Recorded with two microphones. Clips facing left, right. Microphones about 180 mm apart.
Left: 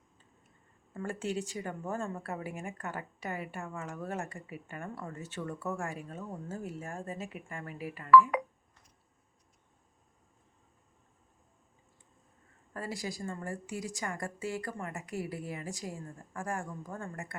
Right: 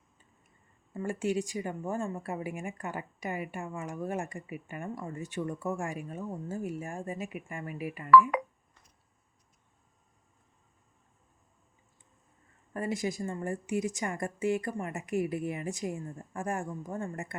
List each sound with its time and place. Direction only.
0.9 s speech: 10° right (ahead or behind)
12.7 s a woman's voice: 20° right (ahead or behind)